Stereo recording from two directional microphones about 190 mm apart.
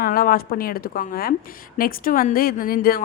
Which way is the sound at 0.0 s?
50° left (ahead or behind).